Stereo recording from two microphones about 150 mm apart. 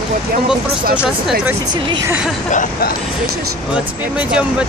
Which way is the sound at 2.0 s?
10° right (ahead or behind).